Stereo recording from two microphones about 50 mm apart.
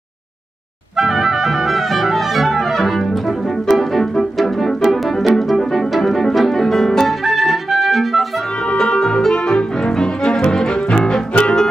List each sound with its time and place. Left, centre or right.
0.9 s clarinet: centre
3.6 s music: centre
8.7 s music: centre